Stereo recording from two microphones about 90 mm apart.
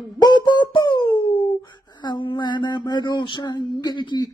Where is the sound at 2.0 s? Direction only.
65° left (ahead or behind).